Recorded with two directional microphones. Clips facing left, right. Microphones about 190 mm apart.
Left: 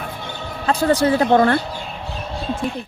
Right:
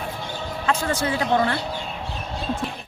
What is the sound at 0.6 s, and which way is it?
Speech, 35° left (ahead or behind).